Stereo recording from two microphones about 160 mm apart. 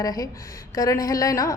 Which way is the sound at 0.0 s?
25° left (ahead or behind).